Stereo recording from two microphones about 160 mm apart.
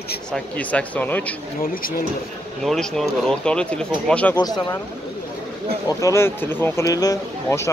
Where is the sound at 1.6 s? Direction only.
65° left (ahead or behind).